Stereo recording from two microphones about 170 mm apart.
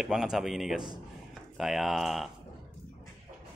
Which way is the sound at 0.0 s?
Centre (ahead or behind).